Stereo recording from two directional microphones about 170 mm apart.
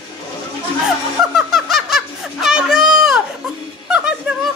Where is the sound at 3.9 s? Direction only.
5° right (ahead or behind).